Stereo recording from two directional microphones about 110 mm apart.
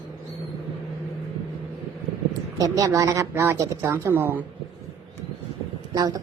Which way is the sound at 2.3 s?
30° right (ahead or behind).